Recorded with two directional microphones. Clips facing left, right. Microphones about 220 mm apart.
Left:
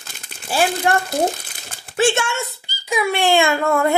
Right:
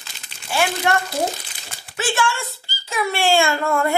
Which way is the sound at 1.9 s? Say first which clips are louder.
Left 4 dB; 25° left (ahead or behind).